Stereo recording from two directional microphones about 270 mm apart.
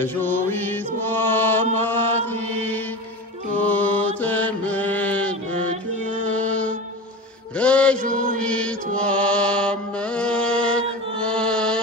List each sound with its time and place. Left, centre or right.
0.0 s mantra: centre
6.2 s music: centre
7.5 s mantra: centre
8.0 s chant: right
8.4 s mantra: centre
11.1 s chant: centre